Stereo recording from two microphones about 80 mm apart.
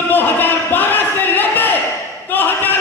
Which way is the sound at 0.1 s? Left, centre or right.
Left.